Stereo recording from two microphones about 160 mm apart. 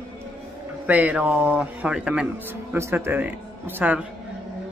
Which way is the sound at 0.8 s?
10° right (ahead or behind).